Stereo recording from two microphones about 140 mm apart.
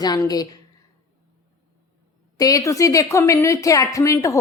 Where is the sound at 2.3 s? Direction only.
25° left (ahead or behind).